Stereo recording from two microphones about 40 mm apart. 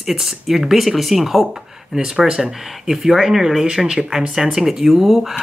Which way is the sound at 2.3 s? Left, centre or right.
Centre.